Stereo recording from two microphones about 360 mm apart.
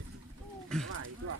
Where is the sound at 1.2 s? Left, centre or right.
Right.